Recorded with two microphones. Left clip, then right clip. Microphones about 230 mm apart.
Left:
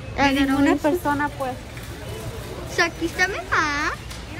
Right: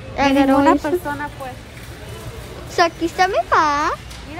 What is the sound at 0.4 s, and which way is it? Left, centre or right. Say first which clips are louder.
Speech: right 6 dB; centre.